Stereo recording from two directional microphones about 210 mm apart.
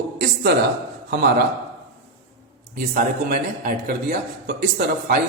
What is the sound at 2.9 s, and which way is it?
A man's voice, 45° right (ahead or behind).